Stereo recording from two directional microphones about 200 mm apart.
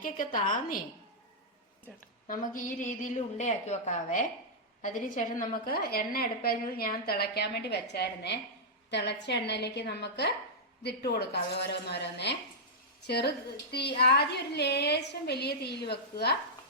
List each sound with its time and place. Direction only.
0.3 s a woman's voice: 40° left (ahead or behind)
2.2 s a woman's voice: 40° left (ahead or behind)